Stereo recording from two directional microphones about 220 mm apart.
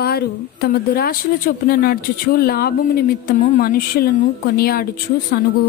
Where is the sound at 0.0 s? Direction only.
45° left (ahead or behind).